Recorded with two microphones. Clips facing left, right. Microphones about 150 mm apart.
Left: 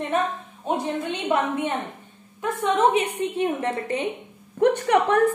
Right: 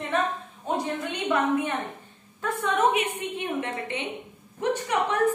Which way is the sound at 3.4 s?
40° left (ahead or behind).